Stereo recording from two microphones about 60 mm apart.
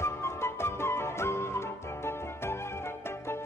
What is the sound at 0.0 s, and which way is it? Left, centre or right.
Flute, left.